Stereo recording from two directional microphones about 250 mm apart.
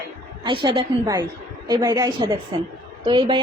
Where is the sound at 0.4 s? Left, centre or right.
Centre.